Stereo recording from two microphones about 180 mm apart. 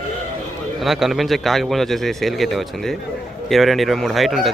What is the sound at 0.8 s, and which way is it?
A man's voice, centre (ahead or behind).